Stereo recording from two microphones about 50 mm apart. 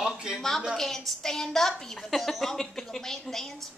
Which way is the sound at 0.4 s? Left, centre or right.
Centre.